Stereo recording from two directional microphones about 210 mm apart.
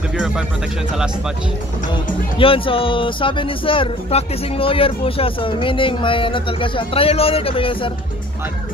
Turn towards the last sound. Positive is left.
turn(degrees=25)  # may be behind; listen again after turning